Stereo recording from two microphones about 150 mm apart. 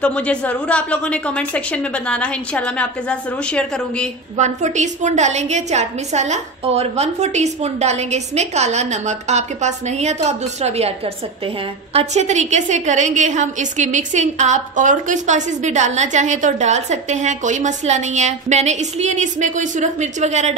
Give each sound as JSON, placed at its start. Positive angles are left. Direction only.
{"t": 0.0, "sound": "a woman's voice", "side_deg": 10}
{"t": 4.4, "sound": "a woman's voice", "side_deg": -50}